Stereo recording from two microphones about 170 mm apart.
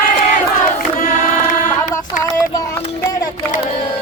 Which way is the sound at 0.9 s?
55° left (ahead or behind).